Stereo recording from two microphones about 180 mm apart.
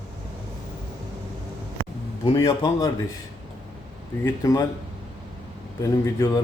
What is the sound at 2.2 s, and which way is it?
Speech, 20° left (ahead or behind).